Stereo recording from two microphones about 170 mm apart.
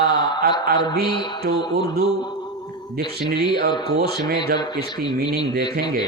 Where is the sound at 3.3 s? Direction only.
70° right (ahead or behind).